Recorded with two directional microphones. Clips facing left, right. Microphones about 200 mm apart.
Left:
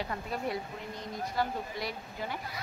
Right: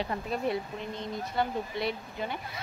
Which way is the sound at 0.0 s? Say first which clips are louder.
Right 4 dB; 25° right (ahead or behind).